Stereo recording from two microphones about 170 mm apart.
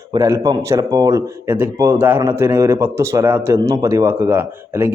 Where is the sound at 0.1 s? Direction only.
15° right (ahead or behind).